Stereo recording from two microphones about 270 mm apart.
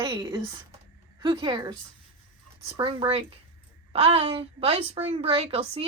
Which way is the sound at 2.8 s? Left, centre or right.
Centre.